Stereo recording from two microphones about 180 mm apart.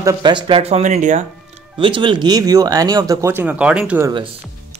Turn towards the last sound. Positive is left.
turn(degrees=-30)  # may be behind; listen again after turning